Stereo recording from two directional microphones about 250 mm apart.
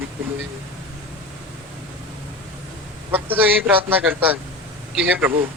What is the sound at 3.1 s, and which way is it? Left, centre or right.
Speech, centre.